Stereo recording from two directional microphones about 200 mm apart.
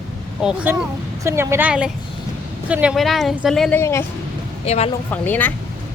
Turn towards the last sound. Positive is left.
turn(degrees=10)  # may be behind; listen again after turning